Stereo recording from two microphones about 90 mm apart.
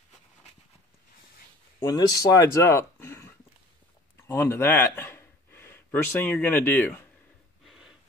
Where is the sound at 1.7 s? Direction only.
40° left (ahead or behind); by 7.0 s 20° left (ahead or behind).